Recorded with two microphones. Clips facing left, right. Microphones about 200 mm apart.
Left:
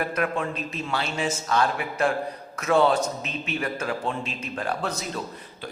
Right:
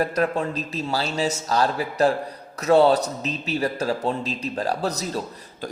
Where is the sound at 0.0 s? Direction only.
35° right (ahead or behind).